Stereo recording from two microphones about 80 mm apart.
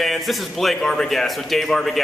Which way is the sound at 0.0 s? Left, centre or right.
Centre.